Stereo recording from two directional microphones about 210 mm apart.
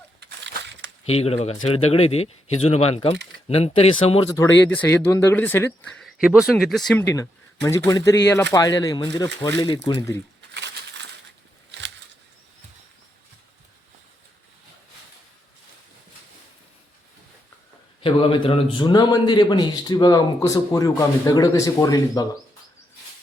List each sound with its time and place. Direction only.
0.2 s splash: 55° right (ahead or behind)
1.0 s speech: 30° left (ahead or behind)
4.7 s speech: 10° left (ahead or behind)
10.5 s crushing: 55° right (ahead or behind)
18.0 s speech: 25° left (ahead or behind)